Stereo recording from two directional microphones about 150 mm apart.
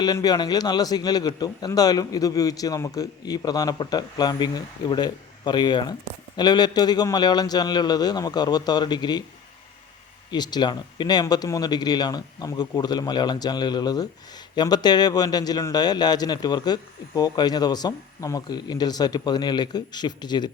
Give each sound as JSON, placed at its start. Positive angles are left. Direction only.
{"t": 0.0, "sound": "a man's voice", "side_deg": 25}
{"t": 10.3, "sound": "a man's voice", "side_deg": 30}